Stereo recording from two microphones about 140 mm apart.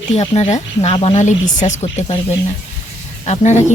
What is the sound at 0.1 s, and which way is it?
Speech, 50° left (ahead or behind).